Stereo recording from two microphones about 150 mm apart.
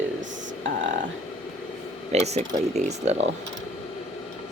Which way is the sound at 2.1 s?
45° right (ahead or behind).